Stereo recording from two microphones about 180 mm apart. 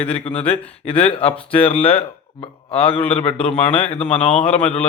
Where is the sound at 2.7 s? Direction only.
30° left (ahead or behind).